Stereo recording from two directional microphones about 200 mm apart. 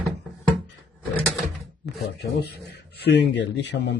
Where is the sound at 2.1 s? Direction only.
55° left (ahead or behind).